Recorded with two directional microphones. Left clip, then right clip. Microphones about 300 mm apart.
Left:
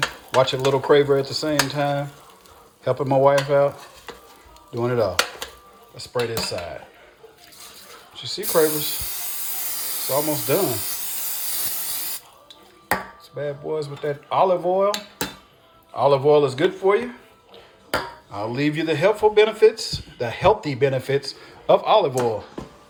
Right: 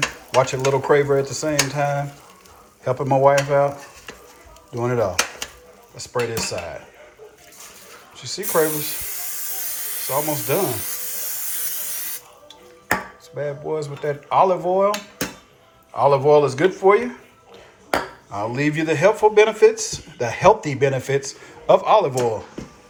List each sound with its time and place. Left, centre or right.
0.3 s speech: centre
8.1 s speech: centre
9.6 s a sound: left
10.1 s speech: centre
10.6 s speech: left
11.5 s spray: left
12.9 s chopping: centre
16.0 s speech: centre
18.3 s speech: centre